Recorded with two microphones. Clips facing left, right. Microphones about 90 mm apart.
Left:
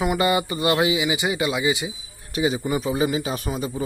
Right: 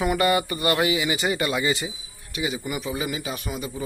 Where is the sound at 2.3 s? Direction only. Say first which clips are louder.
Left 6 dB; 35° left (ahead or behind).